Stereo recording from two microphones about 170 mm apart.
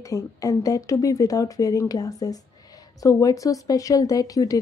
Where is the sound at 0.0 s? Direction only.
20° left (ahead or behind).